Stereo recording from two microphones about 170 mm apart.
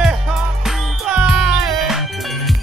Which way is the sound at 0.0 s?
Centre (ahead or behind).